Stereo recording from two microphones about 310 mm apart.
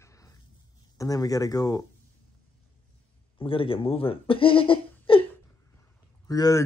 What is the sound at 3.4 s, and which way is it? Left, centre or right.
Speech, centre.